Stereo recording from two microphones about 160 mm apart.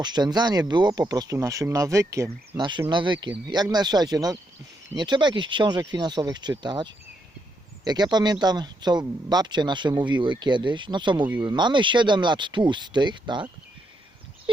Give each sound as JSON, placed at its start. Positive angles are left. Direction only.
{"t": 0.0, "sound": "speech", "side_deg": -25}
{"t": 8.1, "sound": "speech", "side_deg": -25}